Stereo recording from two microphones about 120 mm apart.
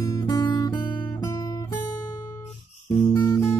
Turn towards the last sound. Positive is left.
turn(degrees=25)  # may be behind; listen again after turning